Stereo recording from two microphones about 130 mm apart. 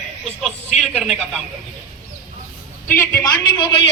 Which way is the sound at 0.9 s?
5° right (ahead or behind).